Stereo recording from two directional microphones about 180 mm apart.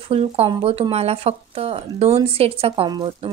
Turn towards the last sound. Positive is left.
turn(degrees=-30)  # may be behind; listen again after turning